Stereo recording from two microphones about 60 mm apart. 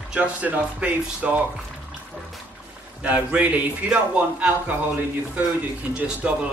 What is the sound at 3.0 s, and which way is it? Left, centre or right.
Speech, right.